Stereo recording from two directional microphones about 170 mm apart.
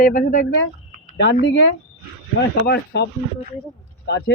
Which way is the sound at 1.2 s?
85° left.